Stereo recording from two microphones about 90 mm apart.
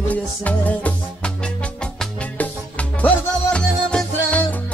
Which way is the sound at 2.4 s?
15° left (ahead or behind).